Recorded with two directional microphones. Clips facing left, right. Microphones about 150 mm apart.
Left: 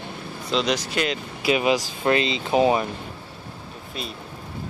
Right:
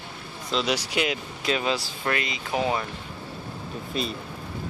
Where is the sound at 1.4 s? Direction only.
15° left (ahead or behind).